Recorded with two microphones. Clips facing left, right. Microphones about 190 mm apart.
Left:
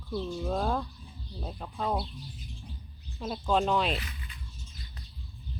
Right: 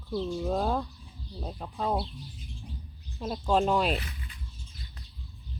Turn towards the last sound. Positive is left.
turn(degrees=-35)  # may be behind; listen again after turning